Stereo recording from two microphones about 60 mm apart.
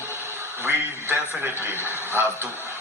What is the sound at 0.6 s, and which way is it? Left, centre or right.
A man's voice, right.